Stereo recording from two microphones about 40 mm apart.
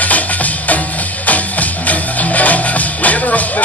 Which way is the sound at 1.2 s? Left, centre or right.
Left.